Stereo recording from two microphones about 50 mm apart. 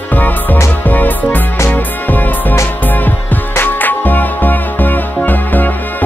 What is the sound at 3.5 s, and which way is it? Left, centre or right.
Music, left.